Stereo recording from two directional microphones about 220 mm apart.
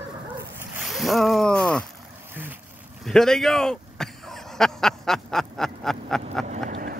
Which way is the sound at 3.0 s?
Centre (ahead or behind).